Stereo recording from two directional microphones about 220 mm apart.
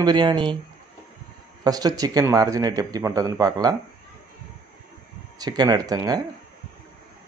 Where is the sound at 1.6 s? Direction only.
15° right (ahead or behind).